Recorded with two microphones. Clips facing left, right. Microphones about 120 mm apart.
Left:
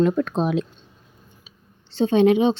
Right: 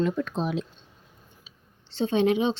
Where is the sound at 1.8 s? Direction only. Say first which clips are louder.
Left 6 dB; 45° left (ahead or behind).